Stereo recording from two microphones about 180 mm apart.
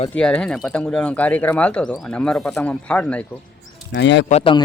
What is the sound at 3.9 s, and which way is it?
Speech, 80° left.